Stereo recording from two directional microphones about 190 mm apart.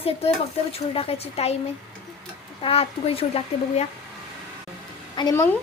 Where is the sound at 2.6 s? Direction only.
30° left (ahead or behind).